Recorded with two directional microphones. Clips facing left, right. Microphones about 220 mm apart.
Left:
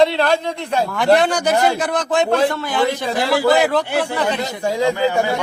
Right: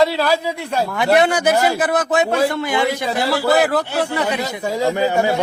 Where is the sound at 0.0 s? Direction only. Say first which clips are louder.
Left 1 dB; 5° right (ahead or behind).